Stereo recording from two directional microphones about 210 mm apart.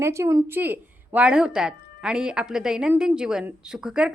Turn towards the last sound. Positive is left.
turn(degrees=-5)  # may be behind; listen again after turning